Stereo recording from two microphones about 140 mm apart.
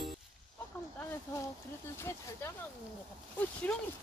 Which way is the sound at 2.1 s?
20° left (ahead or behind).